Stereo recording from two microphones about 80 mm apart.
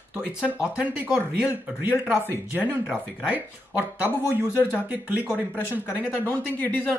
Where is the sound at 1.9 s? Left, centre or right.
Left.